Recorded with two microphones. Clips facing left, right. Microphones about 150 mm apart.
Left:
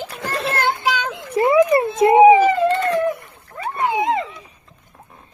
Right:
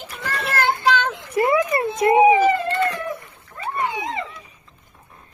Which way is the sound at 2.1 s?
30° left (ahead or behind).